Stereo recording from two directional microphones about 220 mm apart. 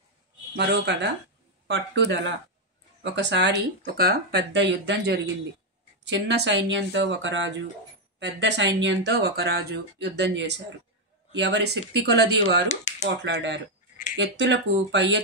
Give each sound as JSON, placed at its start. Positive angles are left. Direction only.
{"t": 0.6, "sound": "speech", "side_deg": -50}
{"t": 12.6, "sound": "speech", "side_deg": 30}
{"t": 13.2, "sound": "speech", "side_deg": -55}